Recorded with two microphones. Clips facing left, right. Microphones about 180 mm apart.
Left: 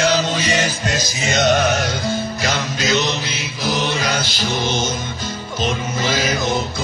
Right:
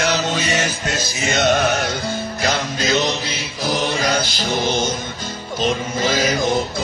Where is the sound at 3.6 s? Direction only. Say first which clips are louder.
Right 1 dB; 45° right (ahead or behind).